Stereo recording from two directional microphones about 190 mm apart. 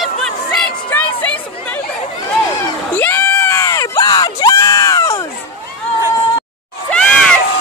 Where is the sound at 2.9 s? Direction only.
10° left (ahead or behind).